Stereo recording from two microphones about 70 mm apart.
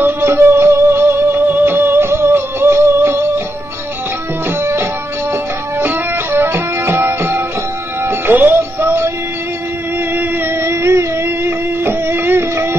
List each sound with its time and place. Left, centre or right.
0.0 s music: right
4.6 s music: right
10.1 s music: right
10.7 s a sound: right